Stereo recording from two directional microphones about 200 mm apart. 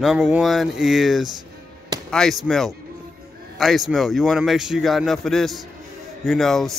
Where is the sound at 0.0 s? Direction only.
5° right (ahead or behind).